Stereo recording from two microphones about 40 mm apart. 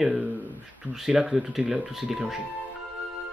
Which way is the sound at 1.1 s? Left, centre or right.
Centre.